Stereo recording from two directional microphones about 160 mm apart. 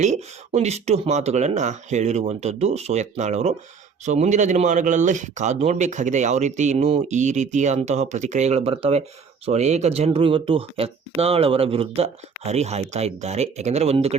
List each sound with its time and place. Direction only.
0.0 s speech: 45° right (ahead or behind)